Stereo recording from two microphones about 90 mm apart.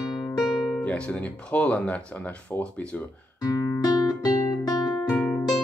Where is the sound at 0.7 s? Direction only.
10° left (ahead or behind).